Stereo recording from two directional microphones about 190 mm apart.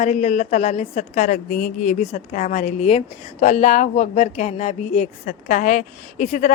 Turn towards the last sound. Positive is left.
turn(degrees=40)  # may be behind; listen again after turning